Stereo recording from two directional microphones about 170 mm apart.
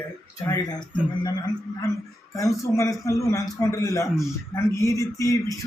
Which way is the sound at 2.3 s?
20° left (ahead or behind).